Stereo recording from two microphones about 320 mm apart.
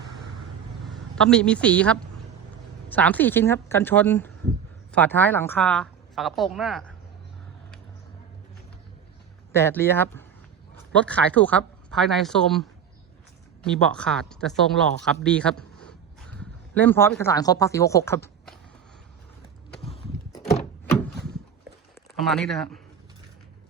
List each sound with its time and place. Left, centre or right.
0.9 s a woman's voice: centre
9.5 s a woman's voice: centre
19.8 s a sound: centre
22.2 s a woman's voice: centre